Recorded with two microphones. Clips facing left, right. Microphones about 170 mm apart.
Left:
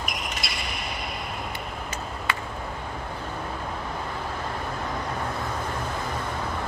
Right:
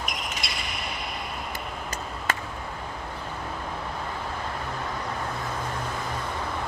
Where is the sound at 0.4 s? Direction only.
Centre (ahead or behind).